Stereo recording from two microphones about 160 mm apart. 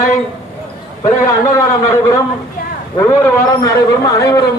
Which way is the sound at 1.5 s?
20° left (ahead or behind).